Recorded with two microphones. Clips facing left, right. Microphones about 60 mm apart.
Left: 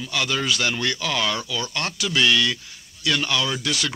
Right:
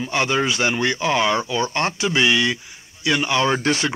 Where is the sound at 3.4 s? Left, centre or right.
Right.